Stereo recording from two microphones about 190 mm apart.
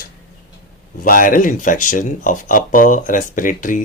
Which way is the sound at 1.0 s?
45° left (ahead or behind).